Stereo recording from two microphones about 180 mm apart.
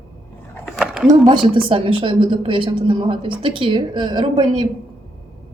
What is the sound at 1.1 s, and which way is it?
Speech, 25° right (ahead or behind).